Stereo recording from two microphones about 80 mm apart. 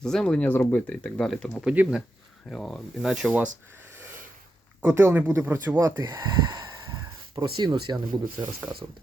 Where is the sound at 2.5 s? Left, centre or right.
Centre.